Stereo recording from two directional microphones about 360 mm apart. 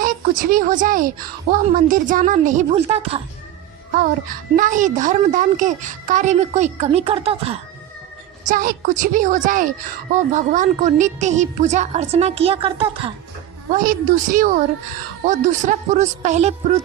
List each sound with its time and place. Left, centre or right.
0.0 s a woman's voice: right
4.6 s a woman's voice: right